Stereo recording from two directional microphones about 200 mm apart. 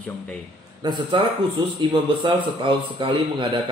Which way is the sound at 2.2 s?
25° right (ahead or behind).